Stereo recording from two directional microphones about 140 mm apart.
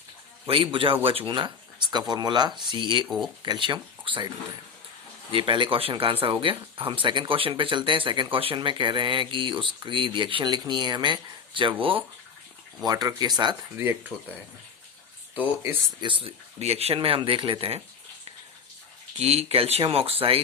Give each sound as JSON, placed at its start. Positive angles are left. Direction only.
{"t": 0.4, "sound": "speech", "side_deg": -40}
{"t": 5.3, "sound": "speech", "side_deg": -35}
{"t": 12.8, "sound": "speech", "side_deg": -25}
{"t": 13.7, "sound": "speech", "side_deg": -15}
{"t": 16.0, "sound": "speech", "side_deg": -35}
{"t": 19.2, "sound": "speech", "side_deg": -45}